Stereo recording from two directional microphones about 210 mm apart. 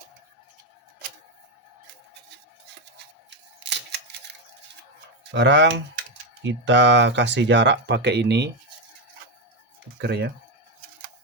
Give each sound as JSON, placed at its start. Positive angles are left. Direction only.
{"t": 3.2, "sound": "camera", "side_deg": -55}
{"t": 5.3, "sound": "speech", "side_deg": -55}
{"t": 10.0, "sound": "speech", "side_deg": -50}